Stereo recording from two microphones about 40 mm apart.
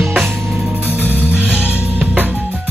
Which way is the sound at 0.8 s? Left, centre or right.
Right.